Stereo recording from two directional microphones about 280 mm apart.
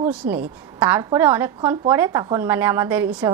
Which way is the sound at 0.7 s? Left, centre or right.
Centre.